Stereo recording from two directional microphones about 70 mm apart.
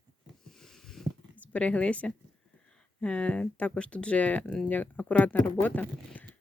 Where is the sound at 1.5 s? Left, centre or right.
Centre.